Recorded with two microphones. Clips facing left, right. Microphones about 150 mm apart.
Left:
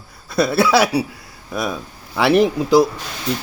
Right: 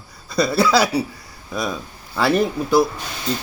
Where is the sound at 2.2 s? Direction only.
75° left (ahead or behind).